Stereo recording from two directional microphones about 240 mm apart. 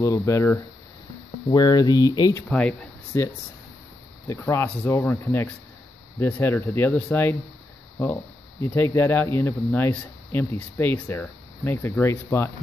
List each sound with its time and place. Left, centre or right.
0.0 s speech: centre
4.3 s speech: centre